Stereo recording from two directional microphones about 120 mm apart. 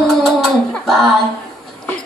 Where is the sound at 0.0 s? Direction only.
5° left (ahead or behind).